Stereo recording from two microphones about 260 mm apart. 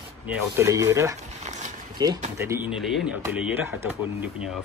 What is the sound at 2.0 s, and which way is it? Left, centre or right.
Speech, centre.